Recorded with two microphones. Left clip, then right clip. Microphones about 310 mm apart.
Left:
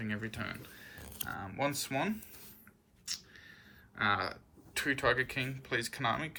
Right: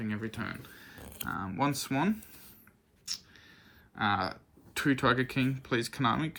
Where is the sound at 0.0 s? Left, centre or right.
Centre.